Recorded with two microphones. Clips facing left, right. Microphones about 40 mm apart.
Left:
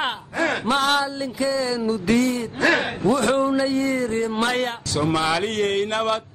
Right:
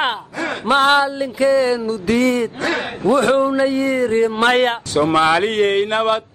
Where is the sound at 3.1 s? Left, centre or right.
Right.